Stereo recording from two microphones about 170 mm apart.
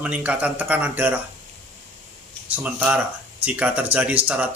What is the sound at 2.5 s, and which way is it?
Speech, 10° right (ahead or behind).